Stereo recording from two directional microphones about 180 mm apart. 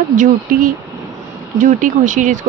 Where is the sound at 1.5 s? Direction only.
45° right (ahead or behind).